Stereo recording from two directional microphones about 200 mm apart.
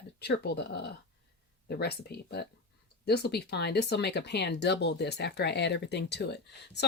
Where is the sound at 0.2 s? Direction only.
55° left (ahead or behind).